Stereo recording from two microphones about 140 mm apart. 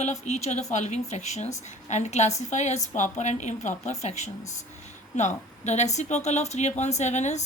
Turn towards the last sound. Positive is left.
turn(degrees=55)  # may be behind; listen again after turning